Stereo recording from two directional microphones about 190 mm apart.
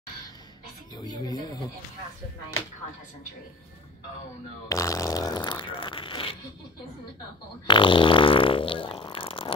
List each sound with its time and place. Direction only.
0.9 s speech: 20° left (ahead or behind)
4.6 s speech: 15° left (ahead or behind)
7.6 s fart: 25° left (ahead or behind)